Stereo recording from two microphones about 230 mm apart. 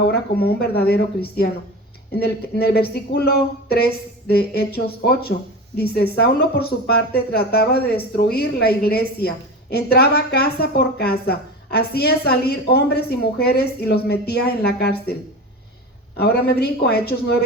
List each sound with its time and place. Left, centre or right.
0.1 s a woman's voice: left
16.1 s a woman's voice: left